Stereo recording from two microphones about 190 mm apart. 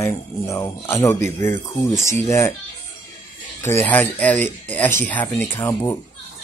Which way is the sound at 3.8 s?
10° left (ahead or behind).